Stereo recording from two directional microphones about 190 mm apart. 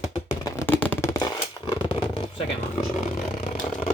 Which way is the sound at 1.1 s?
20° left (ahead or behind).